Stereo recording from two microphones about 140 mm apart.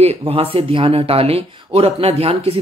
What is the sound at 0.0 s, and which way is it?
Speech, 45° right (ahead or behind).